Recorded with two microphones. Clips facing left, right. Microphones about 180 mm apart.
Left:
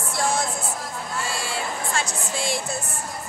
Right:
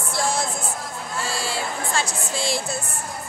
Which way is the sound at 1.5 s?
30° right (ahead or behind).